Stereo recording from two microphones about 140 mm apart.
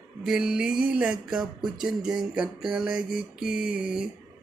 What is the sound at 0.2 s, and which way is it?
Music, 5° right (ahead or behind).